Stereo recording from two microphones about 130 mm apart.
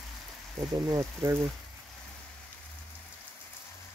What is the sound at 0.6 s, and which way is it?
Speech, 25° right (ahead or behind).